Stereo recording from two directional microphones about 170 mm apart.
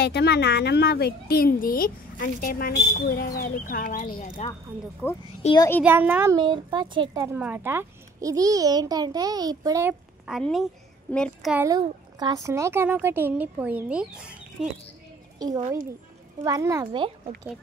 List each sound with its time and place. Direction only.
0.0 s a woman's voice: 75° left (ahead or behind); by 4.5 s 45° left (ahead or behind)
5.0 s a child's voice: 10° left (ahead or behind)
5.4 s a child's voice: 40° left (ahead or behind)
5.9 s a child's voice: 10° right (ahead or behind)
6.3 s a child's voice: 30° right (ahead or behind)
7.3 s a child's voice: 10° right (ahead or behind)
10.2 s a woman's voice: centre (ahead or behind)
11.5 s a child's voice: 20° right (ahead or behind)
15.3 s a sound: 20° right (ahead or behind)
16.4 s a child's voice: 20° right (ahead or behind)